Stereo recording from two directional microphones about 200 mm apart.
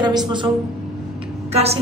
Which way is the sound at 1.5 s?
30° right (ahead or behind).